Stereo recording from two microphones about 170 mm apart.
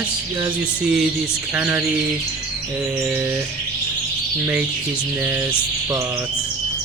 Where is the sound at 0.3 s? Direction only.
15° right (ahead or behind).